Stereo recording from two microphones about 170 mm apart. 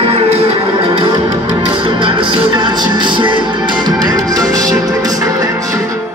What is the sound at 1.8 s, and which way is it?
Music, 30° right (ahead or behind).